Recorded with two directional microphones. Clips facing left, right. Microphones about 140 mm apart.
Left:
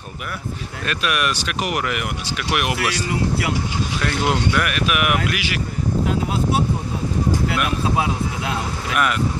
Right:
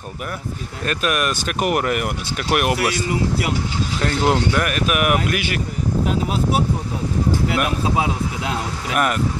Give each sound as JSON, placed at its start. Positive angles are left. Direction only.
{"t": 0.8, "sound": "speech", "side_deg": -40}
{"t": 4.0, "sound": "speech", "side_deg": -40}
{"t": 8.9, "sound": "speech", "side_deg": -40}